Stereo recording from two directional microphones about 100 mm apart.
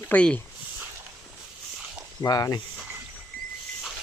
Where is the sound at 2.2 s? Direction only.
40° left (ahead or behind).